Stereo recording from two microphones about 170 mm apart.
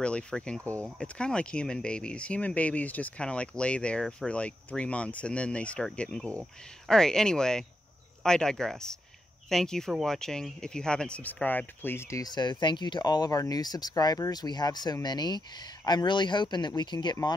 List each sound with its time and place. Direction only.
0.0 s speech: 5° left (ahead or behind); by 17.3 s 25° left (ahead or behind)